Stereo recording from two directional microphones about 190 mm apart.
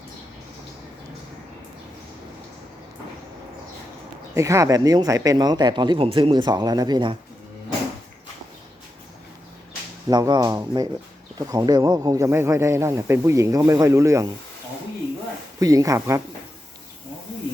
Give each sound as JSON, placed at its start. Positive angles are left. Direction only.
{"t": 4.4, "sound": "speech", "side_deg": -15}
{"t": 10.1, "sound": "speech", "side_deg": -20}
{"t": 15.6, "sound": "speech", "side_deg": -20}